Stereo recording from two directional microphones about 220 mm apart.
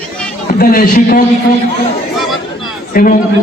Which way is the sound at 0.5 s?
40° left (ahead or behind).